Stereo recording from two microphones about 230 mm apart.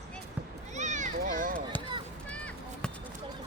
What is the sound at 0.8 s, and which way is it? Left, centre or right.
Children playing, right.